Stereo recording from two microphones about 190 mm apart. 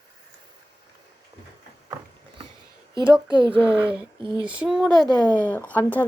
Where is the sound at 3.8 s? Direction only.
25° right (ahead or behind).